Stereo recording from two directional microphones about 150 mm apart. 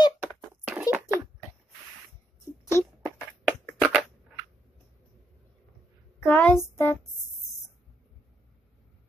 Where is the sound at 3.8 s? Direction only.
Centre (ahead or behind).